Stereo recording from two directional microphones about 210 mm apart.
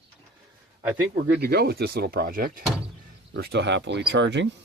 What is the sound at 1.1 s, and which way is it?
Speech, 50° right (ahead or behind).